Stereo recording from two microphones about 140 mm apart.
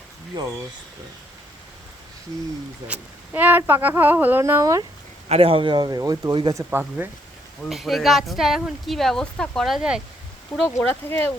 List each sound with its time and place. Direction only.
0.3 s a man's voice: 30° right (ahead or behind)
2.8 s speech: 10° right (ahead or behind)
5.3 s a man's voice: 45° right (ahead or behind)
6.7 s speech: 15° right (ahead or behind)
7.6 s speech: centre (ahead or behind)
10.7 s speech: 20° left (ahead or behind)